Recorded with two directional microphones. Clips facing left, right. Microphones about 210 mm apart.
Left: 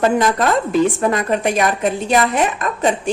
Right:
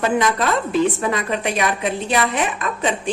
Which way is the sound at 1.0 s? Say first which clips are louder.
Left 4 dB; 45° left (ahead or behind).